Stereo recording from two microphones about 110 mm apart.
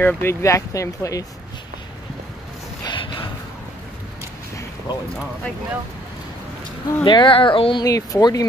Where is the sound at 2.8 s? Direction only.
50° left (ahead or behind).